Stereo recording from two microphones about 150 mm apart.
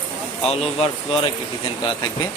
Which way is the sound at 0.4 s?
40° left (ahead or behind).